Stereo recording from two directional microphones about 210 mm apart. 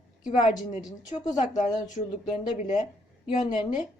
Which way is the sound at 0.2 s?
40° left (ahead or behind).